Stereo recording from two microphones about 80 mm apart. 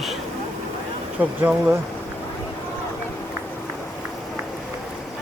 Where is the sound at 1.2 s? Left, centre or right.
Right.